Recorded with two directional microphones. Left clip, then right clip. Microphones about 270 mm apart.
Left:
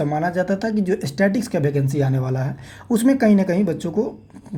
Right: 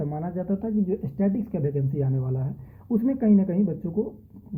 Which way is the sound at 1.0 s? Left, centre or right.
Left.